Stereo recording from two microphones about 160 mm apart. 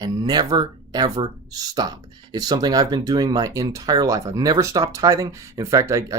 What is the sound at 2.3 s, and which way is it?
Speech, 25° right (ahead or behind).